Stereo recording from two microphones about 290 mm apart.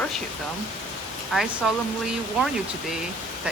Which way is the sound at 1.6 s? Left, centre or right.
Centre.